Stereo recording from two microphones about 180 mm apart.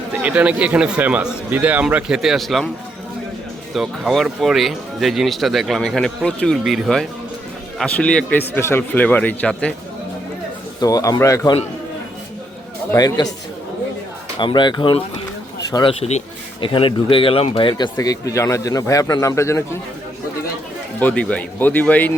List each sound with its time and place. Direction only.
0.1 s speech: 10° right (ahead or behind)
3.8 s speech: centre (ahead or behind)
10.8 s speech: 20° left (ahead or behind)
12.9 s speech: 20° left (ahead or behind)
14.3 s speech: 25° left (ahead or behind)
21.0 s speech: 5° left (ahead or behind)